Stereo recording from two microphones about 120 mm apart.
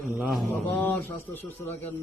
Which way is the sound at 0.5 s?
15° left (ahead or behind).